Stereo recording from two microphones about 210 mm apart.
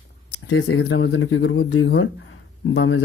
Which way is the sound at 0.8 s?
65° left (ahead or behind).